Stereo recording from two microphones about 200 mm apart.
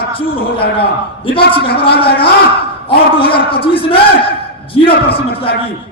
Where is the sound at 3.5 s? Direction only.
25° left (ahead or behind).